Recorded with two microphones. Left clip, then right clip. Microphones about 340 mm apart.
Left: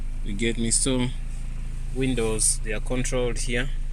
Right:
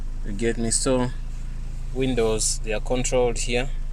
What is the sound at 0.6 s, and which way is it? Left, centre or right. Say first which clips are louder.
Speech: right 3 dB; right.